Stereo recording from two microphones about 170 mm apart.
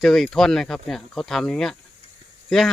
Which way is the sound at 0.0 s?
Centre (ahead or behind).